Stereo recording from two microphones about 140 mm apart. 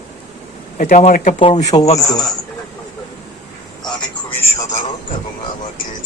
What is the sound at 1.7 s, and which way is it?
Speech, 35° left (ahead or behind).